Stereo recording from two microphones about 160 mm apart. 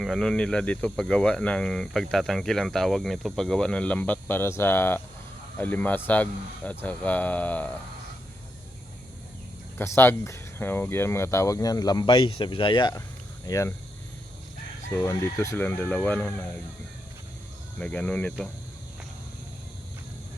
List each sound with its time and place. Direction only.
0.0 s speech: centre (ahead or behind)
9.7 s speech: 15° left (ahead or behind)
15.0 s speech: 15° left (ahead or behind)
17.7 s speech: 10° left (ahead or behind)